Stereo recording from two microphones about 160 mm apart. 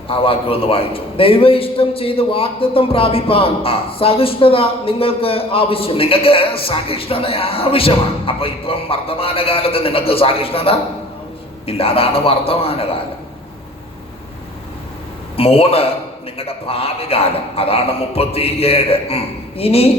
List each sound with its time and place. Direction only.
0.1 s a man's voice: 35° left (ahead or behind)
15.4 s a man's voice: 35° left (ahead or behind)